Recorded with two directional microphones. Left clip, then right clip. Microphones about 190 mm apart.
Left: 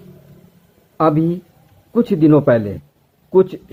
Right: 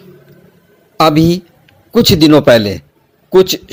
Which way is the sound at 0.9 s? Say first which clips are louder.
Right 6 dB; 35° right (ahead or behind).